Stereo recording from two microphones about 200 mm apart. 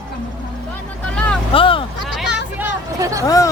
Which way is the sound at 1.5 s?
25° left (ahead or behind).